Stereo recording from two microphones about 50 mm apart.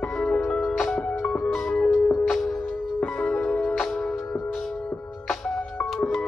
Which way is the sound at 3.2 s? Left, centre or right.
Left.